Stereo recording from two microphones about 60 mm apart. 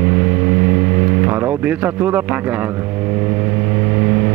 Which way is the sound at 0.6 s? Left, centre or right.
Right.